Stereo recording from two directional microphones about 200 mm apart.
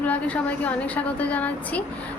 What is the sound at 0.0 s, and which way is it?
A woman's voice, 5° left (ahead or behind).